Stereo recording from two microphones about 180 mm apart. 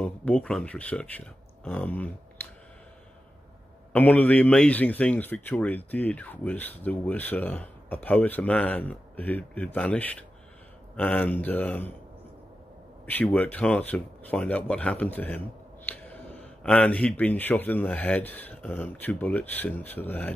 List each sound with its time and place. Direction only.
0.0 s speech: 5° left (ahead or behind)
3.9 s speech: 10° left (ahead or behind)
13.0 s speech: 10° left (ahead or behind)